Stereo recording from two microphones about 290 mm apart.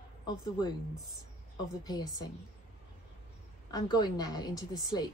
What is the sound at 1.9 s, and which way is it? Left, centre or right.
Speech, centre.